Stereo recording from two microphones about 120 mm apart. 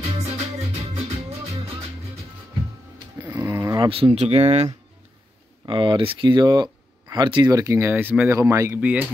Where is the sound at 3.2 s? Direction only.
15° right (ahead or behind).